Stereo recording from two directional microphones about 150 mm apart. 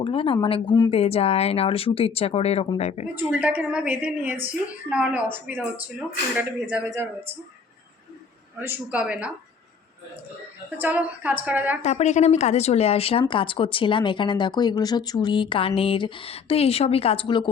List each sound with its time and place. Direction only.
0.0 s speech: 35° left (ahead or behind)
3.2 s a woman's voice: 10° right (ahead or behind)
8.5 s a woman's voice: 15° right (ahead or behind)
10.8 s a woman's voice: 10° right (ahead or behind)
11.8 s speech: 50° left (ahead or behind); by 17.5 s 30° left (ahead or behind)